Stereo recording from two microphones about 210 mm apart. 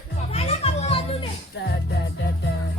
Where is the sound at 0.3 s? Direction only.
30° left (ahead or behind).